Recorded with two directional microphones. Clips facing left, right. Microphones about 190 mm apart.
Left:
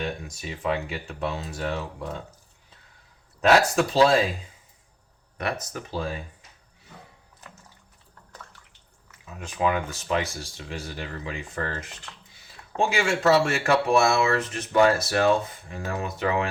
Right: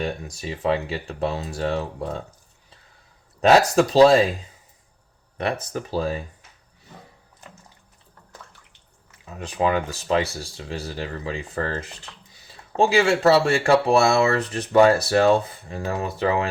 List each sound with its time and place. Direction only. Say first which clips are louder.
0.0 s speech: right 3 dB; 35° right (ahead or behind)
3.4 s speech: right 4 dB; 35° right (ahead or behind)
5.4 s speech: right 4 dB; 30° right (ahead or behind)
9.2 s speech: right 3 dB; 35° right (ahead or behind)